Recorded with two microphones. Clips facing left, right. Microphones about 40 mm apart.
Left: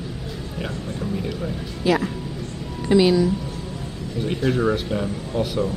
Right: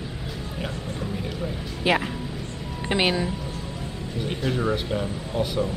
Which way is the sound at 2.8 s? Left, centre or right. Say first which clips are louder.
Left 7 dB; right.